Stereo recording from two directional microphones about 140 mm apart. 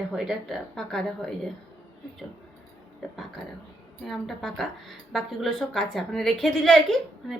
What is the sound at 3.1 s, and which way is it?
A woman's voice, centre (ahead or behind).